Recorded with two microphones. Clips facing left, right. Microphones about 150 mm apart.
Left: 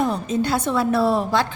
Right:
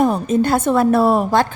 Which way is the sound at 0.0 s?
50° right (ahead or behind).